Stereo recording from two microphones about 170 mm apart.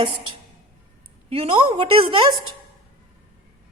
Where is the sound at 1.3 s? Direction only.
30° right (ahead or behind).